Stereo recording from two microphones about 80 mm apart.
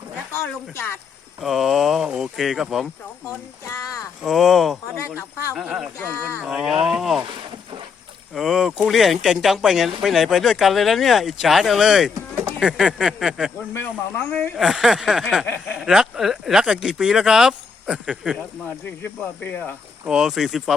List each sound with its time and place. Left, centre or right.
0.3 s speech: left
1.4 s speech: centre
4.2 s speech: centre
6.1 s speech: right
6.4 s speech: centre
8.4 s speech: centre
13.7 s speech: left
14.5 s speech: centre
19.0 s speech: centre
20.1 s speech: centre